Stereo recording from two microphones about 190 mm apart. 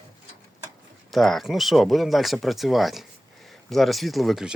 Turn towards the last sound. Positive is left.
turn(degrees=0)  # may be behind; listen again after turning